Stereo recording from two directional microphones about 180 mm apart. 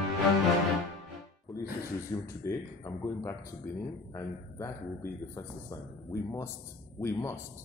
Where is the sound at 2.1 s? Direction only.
15° left (ahead or behind).